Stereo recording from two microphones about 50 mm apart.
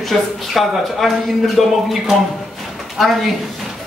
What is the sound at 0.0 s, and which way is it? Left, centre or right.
Speech, centre.